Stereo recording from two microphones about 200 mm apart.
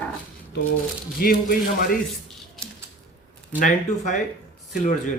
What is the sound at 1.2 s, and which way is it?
Speech, 45° left (ahead or behind).